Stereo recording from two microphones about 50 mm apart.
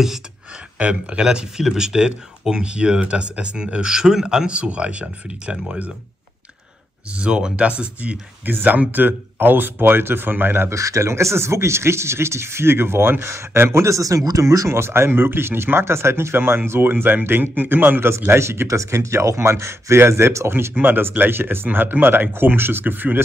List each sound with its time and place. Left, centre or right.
0.7 s speech: right
4.6 s speech: right
7.1 s speech: right
8.5 s speech: right
10.7 s speech: right
18.4 s speech: right
20.7 s speech: right